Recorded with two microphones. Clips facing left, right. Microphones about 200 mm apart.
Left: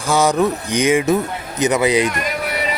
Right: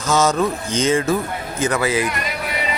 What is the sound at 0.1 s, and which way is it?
Speech, 15° left (ahead or behind).